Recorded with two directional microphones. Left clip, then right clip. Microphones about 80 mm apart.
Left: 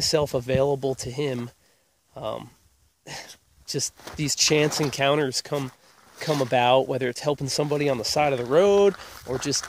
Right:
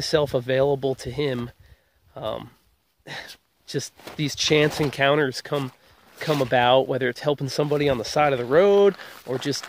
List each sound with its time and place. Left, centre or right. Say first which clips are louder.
0.0 s speech: right 1 dB; left
6.2 s speech: right 2 dB; centre
6.5 s speech: right 1 dB; left
8.4 s speech: right 1 dB; left
9.3 s speech: even; left